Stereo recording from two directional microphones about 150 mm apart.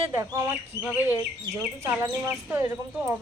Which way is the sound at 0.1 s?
20° right (ahead or behind).